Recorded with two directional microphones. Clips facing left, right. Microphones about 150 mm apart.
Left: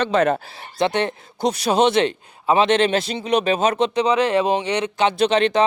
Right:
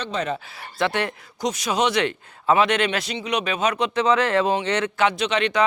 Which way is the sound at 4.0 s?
15° left (ahead or behind).